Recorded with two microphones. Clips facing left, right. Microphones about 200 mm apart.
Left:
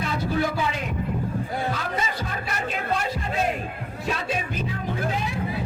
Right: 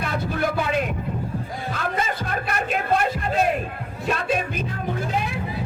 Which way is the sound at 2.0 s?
55° right (ahead or behind).